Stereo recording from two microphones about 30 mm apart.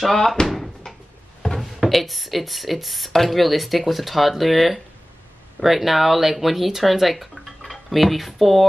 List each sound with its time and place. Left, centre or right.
0.0 s speech: centre
0.8 s cupboard open or close: left
1.4 s a sound: centre
1.8 s speech: centre